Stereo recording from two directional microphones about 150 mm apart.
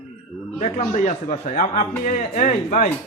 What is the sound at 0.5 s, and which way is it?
A man's voice, 50° left (ahead or behind).